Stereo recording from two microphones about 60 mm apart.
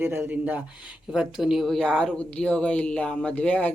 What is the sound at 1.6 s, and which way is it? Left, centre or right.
A woman's voice, centre.